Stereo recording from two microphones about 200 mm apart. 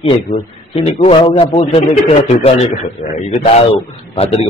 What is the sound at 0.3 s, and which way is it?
A man's voice, 25° left (ahead or behind).